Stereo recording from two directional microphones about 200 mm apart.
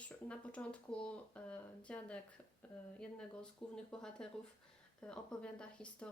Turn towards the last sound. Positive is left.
turn(degrees=5)  # may be behind; listen again after turning